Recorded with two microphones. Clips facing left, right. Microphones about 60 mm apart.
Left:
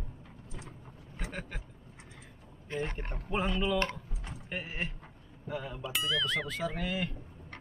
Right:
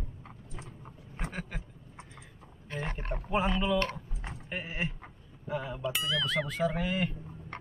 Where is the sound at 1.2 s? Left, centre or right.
Centre.